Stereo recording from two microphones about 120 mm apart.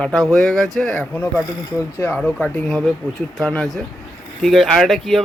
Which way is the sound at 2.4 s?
15° left (ahead or behind).